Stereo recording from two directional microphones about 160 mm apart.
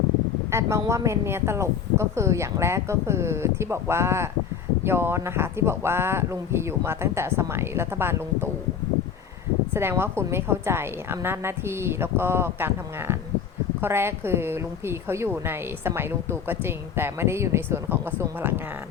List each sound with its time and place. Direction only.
0.5 s a woman's voice: 20° right (ahead or behind)
9.7 s a woman's voice: 15° right (ahead or behind)